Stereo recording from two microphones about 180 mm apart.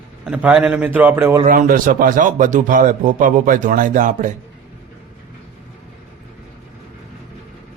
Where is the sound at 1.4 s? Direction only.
50° right (ahead or behind).